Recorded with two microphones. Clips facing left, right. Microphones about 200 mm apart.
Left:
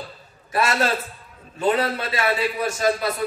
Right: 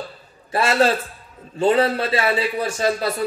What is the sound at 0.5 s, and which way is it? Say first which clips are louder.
A man's voice: right 4 dB; 30° right (ahead or behind).